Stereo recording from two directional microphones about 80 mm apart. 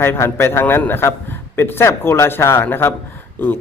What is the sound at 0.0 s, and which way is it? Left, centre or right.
A man's voice, left.